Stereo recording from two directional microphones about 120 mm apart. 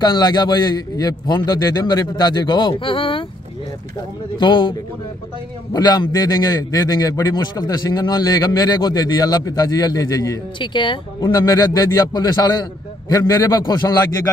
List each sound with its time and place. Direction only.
0.0 s a man's voice: 40° left (ahead or behind)
4.4 s a man's voice: 40° left (ahead or behind)
10.6 s speech: 45° left (ahead or behind)
11.3 s a man's voice: 30° left (ahead or behind)